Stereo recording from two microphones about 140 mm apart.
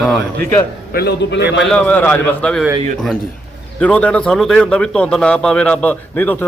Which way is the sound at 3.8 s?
10° left (ahead or behind).